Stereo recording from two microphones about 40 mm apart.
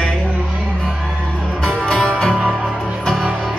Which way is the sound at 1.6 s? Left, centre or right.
Centre.